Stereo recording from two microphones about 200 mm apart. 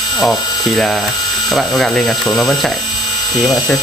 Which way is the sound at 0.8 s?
Centre (ahead or behind).